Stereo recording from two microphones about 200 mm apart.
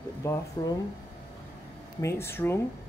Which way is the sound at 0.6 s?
20° left (ahead or behind).